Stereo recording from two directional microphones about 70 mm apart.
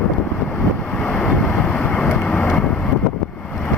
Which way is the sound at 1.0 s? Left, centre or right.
Centre.